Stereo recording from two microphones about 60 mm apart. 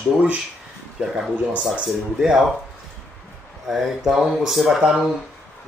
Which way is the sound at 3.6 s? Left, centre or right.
Centre.